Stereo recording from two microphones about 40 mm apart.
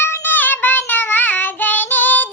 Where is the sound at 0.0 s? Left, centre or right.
Left.